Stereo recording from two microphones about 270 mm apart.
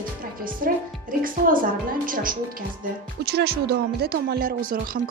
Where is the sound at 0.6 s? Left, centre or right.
Right.